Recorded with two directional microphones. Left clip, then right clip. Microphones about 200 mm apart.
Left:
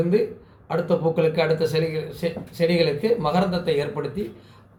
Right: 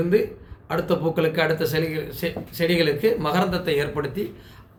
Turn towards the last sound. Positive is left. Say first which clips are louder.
# right 1 dB
turn(degrees=-10)  # may be behind; listen again after turning